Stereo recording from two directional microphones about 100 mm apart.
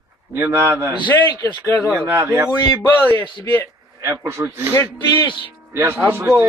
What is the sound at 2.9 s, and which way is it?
Speech, 20° left (ahead or behind).